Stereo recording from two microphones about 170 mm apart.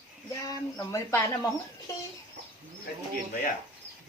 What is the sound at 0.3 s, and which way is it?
Speech, 20° left (ahead or behind).